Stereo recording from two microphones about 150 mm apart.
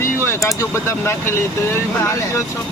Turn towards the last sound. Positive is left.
turn(degrees=20)  # may be behind; listen again after turning